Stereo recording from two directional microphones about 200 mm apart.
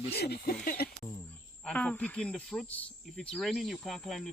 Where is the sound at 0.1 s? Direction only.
55° left (ahead or behind).